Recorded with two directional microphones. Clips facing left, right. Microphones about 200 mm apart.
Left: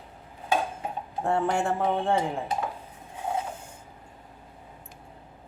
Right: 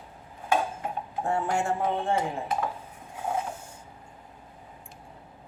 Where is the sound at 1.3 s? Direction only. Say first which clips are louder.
Left 2 dB; 60° left (ahead or behind).